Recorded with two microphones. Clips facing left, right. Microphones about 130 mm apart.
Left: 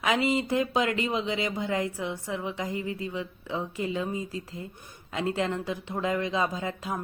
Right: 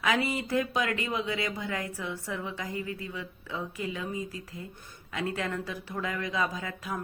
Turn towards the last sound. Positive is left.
turn(degrees=25)  # may be behind; listen again after turning